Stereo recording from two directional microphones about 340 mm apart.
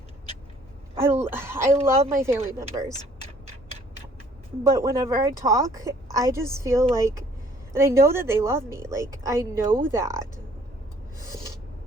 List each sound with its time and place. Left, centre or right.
0.9 s a sound: centre
1.8 s a woman's voice: centre
4.6 s a woman's voice: centre